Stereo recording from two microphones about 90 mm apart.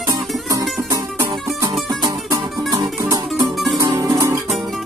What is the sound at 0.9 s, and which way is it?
Music, 40° right (ahead or behind).